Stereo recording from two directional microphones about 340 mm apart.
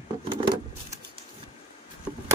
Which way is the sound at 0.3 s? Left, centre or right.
Centre.